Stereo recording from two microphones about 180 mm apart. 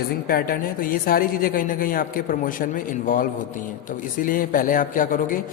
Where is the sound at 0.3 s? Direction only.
55° left (ahead or behind).